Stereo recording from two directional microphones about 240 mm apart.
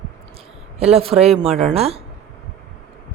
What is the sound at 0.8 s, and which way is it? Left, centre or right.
Speech, right.